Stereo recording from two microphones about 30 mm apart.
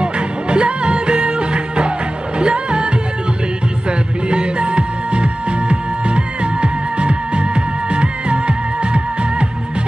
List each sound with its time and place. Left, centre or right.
0.0 s music: right
4.3 s music: right